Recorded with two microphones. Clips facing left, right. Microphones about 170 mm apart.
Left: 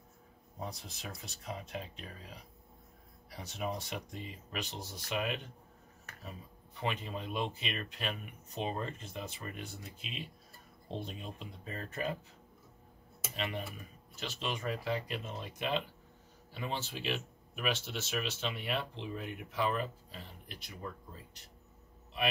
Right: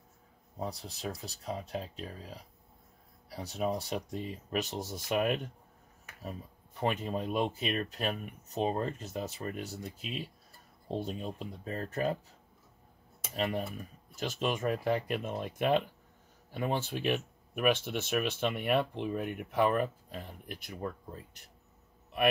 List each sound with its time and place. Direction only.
0.6 s speech: 35° right (ahead or behind)
13.4 s speech: 40° right (ahead or behind)